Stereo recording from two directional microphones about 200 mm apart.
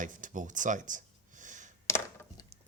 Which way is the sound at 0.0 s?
40° right (ahead or behind).